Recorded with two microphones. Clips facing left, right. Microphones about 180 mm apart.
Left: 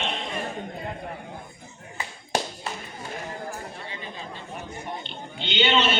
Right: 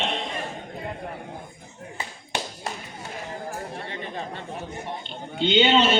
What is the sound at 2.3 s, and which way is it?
Clapping, 40° left (ahead or behind).